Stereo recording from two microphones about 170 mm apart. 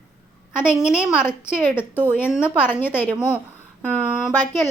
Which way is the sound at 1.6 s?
15° left (ahead or behind).